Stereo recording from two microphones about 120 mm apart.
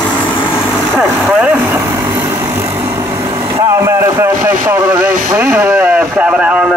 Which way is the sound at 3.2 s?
45° right (ahead or behind).